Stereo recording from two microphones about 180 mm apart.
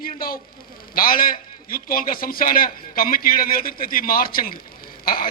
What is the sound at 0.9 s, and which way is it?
A man's voice, 50° left (ahead or behind).